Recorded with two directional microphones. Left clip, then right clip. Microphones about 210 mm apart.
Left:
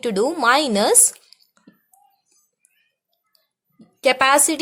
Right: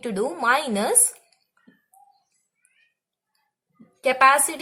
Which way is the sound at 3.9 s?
50° left (ahead or behind).